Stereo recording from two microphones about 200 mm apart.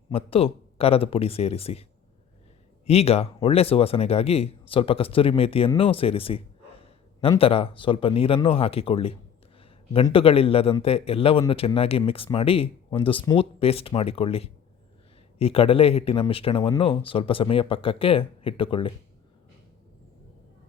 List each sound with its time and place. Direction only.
0.1 s speech: 30° left (ahead or behind)
2.8 s a man's voice: 30° left (ahead or behind)